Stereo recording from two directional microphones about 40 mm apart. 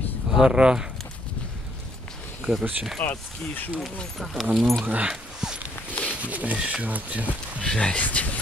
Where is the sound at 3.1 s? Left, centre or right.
Left.